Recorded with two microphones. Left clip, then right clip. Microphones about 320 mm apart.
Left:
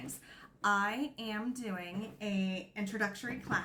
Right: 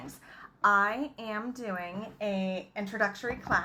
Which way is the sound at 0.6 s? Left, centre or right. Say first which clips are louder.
Right 6 dB; centre.